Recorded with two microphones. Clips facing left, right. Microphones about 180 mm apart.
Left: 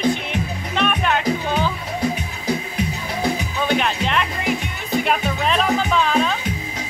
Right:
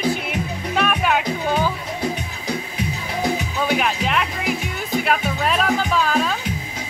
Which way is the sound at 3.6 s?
5° right (ahead or behind).